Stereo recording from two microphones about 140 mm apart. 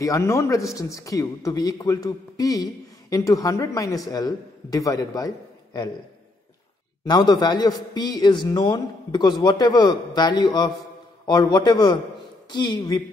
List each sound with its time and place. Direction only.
0.0 s a man's voice: 25° left (ahead or behind)
7.1 s a man's voice: 30° left (ahead or behind)